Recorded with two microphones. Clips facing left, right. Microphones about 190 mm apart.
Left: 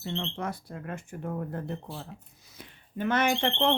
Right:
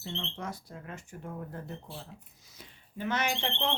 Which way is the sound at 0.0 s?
60° left (ahead or behind).